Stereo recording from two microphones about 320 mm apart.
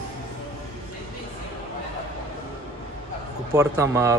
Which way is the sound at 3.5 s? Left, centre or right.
Centre.